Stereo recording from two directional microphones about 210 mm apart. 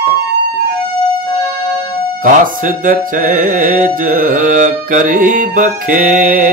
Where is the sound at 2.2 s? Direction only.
40° right (ahead or behind).